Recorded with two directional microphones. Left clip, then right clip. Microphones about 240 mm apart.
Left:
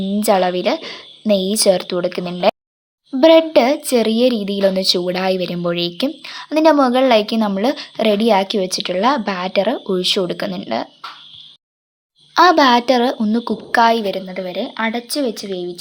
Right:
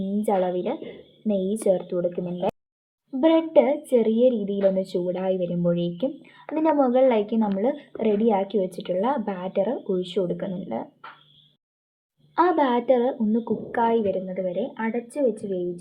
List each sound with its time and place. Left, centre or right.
0.2 s a woman's voice: centre
12.3 s a woman's voice: left